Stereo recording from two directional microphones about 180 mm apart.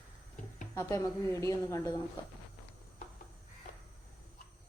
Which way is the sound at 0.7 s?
15° left (ahead or behind).